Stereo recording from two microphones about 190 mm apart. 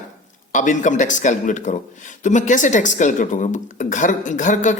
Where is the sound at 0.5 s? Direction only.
40° left (ahead or behind).